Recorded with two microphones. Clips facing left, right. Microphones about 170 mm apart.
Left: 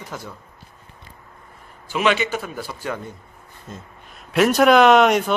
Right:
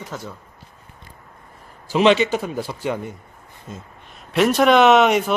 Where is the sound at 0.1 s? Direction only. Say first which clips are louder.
Right 1 dB; 10° left (ahead or behind).